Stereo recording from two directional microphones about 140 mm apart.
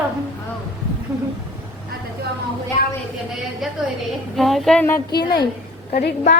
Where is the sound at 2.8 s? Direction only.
70° left (ahead or behind).